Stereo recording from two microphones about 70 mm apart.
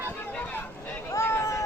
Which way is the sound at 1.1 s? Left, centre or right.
Left.